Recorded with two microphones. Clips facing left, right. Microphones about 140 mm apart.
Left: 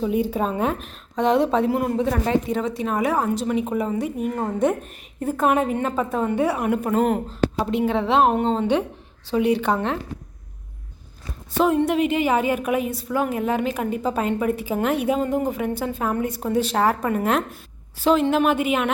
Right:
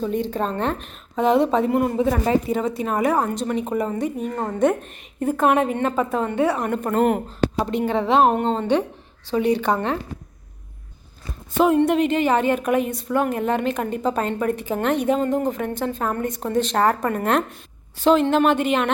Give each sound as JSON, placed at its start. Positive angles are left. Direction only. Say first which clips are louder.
{"t": 0.0, "sound": "speech", "louder": "left 1 dB", "side_deg": 10}
{"t": 11.5, "sound": "speech", "louder": "right 2 dB", "side_deg": 0}